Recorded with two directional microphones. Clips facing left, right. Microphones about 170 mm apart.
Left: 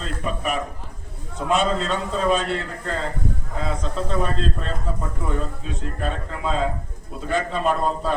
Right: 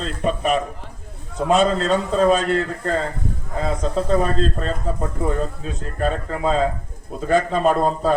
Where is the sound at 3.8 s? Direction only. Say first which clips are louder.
Right 7 dB; 40° right (ahead or behind).